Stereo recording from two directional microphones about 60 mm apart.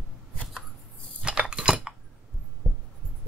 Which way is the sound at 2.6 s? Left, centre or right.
Centre.